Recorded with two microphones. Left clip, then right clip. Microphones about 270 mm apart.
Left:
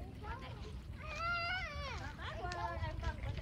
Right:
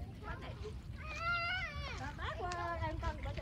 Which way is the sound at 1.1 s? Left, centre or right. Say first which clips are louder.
Right 1 dB; left.